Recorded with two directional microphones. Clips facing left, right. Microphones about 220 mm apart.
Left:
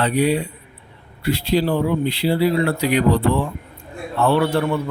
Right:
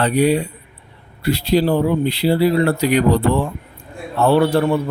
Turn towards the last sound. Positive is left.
turn(degrees=-35)  # may be behind; listen again after turning